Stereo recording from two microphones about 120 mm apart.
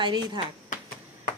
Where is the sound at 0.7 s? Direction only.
90° left.